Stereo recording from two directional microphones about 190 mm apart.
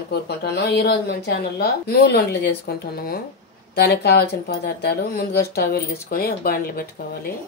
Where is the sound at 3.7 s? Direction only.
55° left (ahead or behind).